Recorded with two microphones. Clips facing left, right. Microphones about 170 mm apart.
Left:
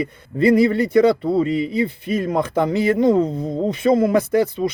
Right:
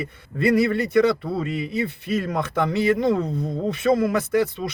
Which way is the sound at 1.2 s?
25° left (ahead or behind).